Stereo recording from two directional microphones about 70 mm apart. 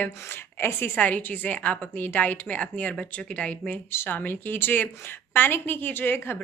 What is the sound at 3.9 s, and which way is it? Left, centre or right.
A woman's voice, left.